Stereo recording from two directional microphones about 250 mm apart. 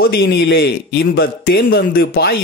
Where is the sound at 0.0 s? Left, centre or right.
Left.